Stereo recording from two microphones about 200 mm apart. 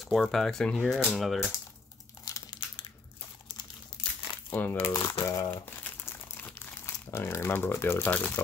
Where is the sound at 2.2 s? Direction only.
20° left (ahead or behind).